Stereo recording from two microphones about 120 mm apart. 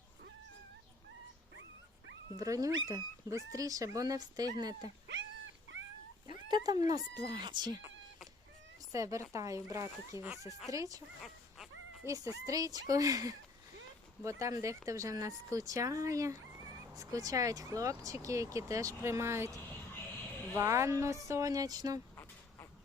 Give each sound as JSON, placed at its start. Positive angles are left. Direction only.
{"t": 2.3, "sound": "speech", "side_deg": -30}
{"t": 6.2, "sound": "speech", "side_deg": -35}
{"t": 8.9, "sound": "speech", "side_deg": -25}
{"t": 11.2, "sound": "a sound", "side_deg": 0}
{"t": 12.0, "sound": "speech", "side_deg": -30}
{"t": 20.6, "sound": "speech", "side_deg": -25}
{"t": 22.1, "sound": "a sound", "side_deg": 25}